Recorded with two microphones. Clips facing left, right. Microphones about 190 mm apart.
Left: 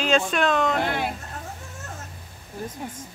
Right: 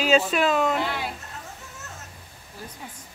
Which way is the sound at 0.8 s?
55° left (ahead or behind).